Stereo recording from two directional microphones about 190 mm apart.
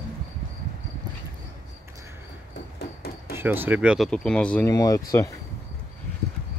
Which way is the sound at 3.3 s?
10° right (ahead or behind).